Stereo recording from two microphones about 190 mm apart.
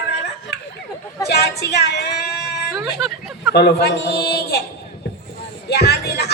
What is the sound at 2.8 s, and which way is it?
Speech, centre (ahead or behind).